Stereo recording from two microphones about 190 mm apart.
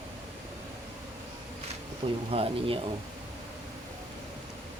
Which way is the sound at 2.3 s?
30° right (ahead or behind).